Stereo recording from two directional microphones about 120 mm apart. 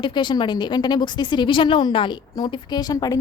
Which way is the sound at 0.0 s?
40° left (ahead or behind).